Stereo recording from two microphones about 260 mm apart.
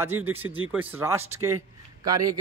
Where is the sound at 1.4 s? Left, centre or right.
Right.